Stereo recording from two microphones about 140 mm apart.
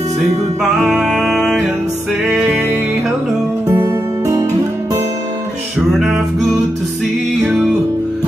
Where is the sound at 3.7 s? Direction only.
25° right (ahead or behind).